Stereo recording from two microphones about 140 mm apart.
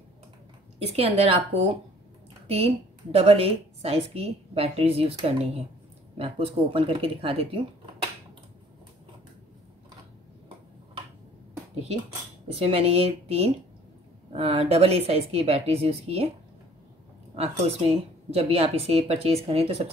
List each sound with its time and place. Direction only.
0.7 s a woman's voice: 45° right (ahead or behind)
2.4 s a woman's voice: 45° right (ahead or behind)
12.5 s a woman's voice: 45° right (ahead or behind)
17.4 s a woman's voice: 45° right (ahead or behind)